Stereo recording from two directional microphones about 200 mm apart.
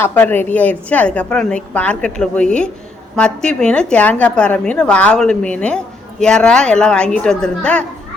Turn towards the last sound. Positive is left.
turn(degrees=5)  # may be behind; listen again after turning